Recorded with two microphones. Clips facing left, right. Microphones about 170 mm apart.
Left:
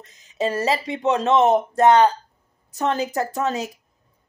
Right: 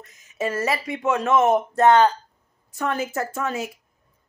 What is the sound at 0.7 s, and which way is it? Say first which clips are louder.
Speech: left 2 dB; 20° left (ahead or behind).